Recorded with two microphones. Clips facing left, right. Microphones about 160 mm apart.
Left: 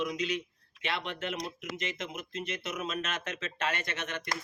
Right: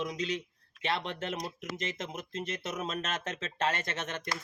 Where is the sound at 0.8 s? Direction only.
35° right (ahead or behind).